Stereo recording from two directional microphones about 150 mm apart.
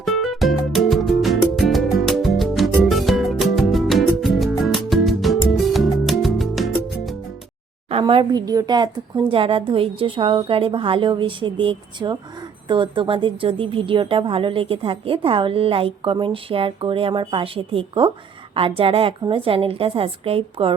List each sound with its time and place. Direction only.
0.0 s music: centre (ahead or behind)
7.9 s a woman's voice: 40° right (ahead or behind)